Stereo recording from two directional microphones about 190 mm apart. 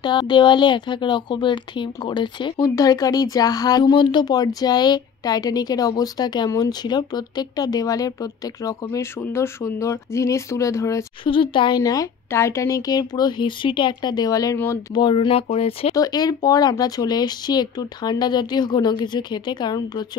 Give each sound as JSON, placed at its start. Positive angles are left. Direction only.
{"t": 0.0, "sound": "speech", "side_deg": 25}
{"t": 11.2, "sound": "speech", "side_deg": 25}
{"t": 15.0, "sound": "speech", "side_deg": 30}
{"t": 16.0, "sound": "speech", "side_deg": 20}